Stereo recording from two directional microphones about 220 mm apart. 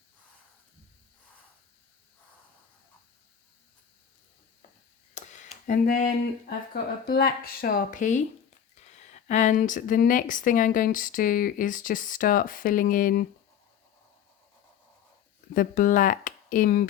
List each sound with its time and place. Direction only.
5.1 s speech: 35° left (ahead or behind)
15.5 s speech: 40° left (ahead or behind)